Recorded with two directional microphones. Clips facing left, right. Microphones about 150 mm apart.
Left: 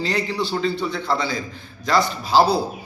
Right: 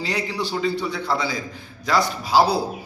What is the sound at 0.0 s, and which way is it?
A man's voice, 10° right (ahead or behind).